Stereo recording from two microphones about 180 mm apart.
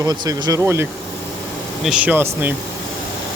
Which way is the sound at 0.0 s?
20° right (ahead or behind).